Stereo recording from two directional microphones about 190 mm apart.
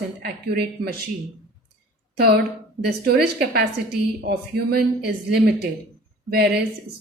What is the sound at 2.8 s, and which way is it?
A woman's voice, 60° right (ahead or behind).